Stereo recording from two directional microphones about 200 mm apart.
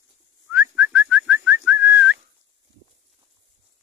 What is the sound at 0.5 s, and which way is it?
Whistling, 10° right (ahead or behind).